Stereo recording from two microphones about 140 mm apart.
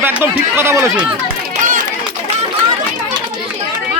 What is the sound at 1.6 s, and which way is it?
Run, 75° right (ahead or behind).